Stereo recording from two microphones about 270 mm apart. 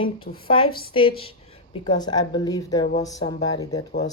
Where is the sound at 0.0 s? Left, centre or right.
Centre.